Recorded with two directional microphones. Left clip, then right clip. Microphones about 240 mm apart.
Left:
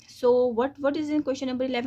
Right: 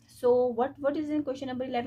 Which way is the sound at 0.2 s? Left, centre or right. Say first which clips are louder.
Left 3 dB; left.